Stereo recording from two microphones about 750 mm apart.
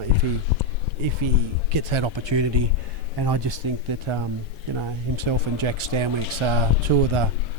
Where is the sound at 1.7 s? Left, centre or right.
Right.